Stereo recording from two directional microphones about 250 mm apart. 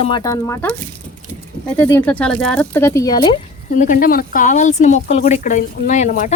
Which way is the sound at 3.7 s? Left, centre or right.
Left.